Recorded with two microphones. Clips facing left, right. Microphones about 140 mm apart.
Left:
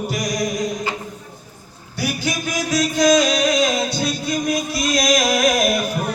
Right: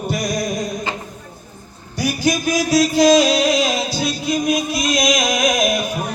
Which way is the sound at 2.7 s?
35° right (ahead or behind).